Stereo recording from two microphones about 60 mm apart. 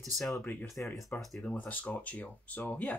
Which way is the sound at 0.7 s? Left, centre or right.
Centre.